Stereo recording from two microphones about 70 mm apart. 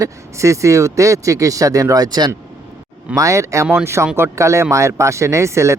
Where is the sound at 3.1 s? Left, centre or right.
Right.